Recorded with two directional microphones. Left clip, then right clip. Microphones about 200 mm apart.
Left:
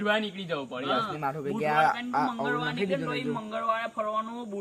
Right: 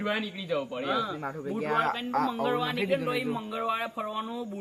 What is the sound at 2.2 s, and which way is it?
Speech, 20° left (ahead or behind).